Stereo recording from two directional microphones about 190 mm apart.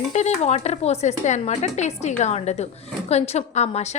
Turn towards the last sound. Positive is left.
turn(degrees=35)  # may be behind; listen again after turning